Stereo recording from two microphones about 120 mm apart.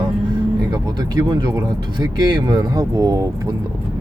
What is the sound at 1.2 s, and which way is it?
Speech, 35° right (ahead or behind).